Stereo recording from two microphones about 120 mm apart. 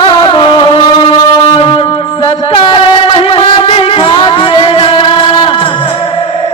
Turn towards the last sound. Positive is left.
turn(degrees=45)  # may be behind; listen again after turning